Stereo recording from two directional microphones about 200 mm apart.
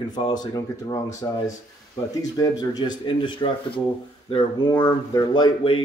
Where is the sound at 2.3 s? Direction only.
20° left (ahead or behind).